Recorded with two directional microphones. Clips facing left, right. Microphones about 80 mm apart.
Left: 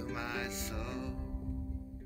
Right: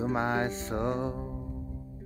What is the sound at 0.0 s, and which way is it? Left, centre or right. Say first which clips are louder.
Music: right 10 dB; right.